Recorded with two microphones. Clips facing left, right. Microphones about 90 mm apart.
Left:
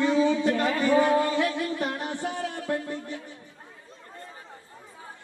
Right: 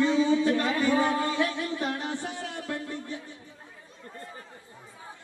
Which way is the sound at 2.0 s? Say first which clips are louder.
Left 3 dB; 20° left (ahead or behind).